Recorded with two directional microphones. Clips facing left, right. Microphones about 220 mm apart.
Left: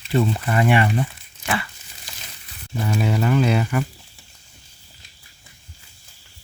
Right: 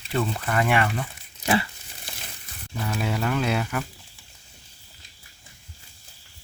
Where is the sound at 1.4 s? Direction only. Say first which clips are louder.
Right 3 dB; 25° right (ahead or behind).